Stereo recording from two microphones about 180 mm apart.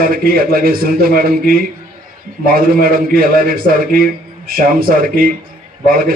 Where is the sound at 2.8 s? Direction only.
55° right (ahead or behind).